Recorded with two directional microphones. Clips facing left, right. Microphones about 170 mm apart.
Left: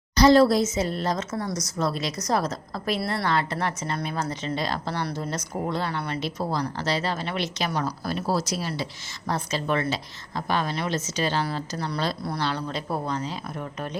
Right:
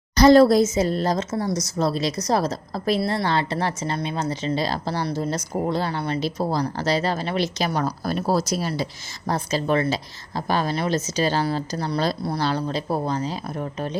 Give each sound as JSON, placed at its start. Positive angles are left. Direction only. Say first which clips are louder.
{"t": 0.2, "sound": "a woman's voice", "louder": "right 4 dB", "side_deg": -45}
{"t": 1.3, "sound": "a woman's voice", "louder": "right 5 dB", "side_deg": -25}